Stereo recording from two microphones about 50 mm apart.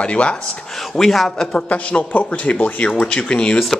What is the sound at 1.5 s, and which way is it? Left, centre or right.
Speech, left.